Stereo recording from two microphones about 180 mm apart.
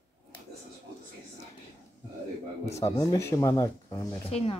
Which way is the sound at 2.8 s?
20° left (ahead or behind).